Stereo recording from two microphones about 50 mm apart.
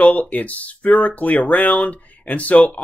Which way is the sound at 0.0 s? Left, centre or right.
Left.